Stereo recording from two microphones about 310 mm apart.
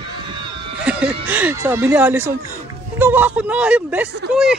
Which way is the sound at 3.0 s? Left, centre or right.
Centre.